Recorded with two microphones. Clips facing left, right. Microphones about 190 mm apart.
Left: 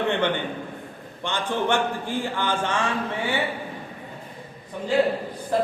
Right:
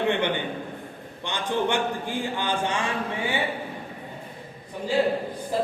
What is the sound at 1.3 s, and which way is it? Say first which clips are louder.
A man's voice: left 1 dB; 15° right (ahead or behind).